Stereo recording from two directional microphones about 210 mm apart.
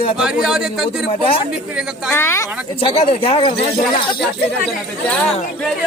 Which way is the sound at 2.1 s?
10° left (ahead or behind).